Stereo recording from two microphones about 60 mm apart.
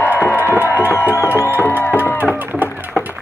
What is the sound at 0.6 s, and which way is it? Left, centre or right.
Music, right.